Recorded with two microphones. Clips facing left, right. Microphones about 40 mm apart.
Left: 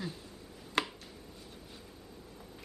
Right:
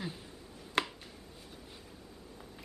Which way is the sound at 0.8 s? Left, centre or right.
Centre.